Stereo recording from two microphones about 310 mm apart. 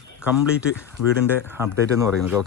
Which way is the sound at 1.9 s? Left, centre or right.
Centre.